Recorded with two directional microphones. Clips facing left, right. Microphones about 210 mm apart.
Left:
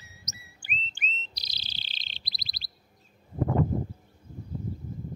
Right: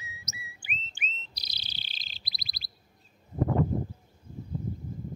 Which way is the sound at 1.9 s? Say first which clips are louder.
Left 1 dB; 5° right (ahead or behind).